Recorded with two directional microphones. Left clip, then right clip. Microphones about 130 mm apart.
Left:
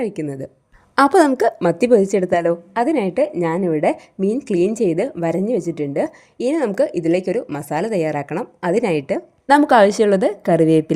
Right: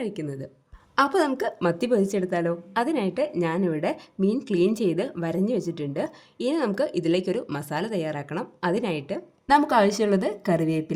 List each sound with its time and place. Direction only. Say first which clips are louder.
0.0 s speech: left 8 dB; 40° left (ahead or behind)
0.9 s a woman's voice: left 9 dB; 55° left (ahead or behind)
1.6 s a woman's voice: left 7 dB; 35° left (ahead or behind); by 10.9 s 65° left (ahead or behind)